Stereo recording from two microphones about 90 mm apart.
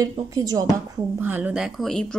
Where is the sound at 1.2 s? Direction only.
20° right (ahead or behind).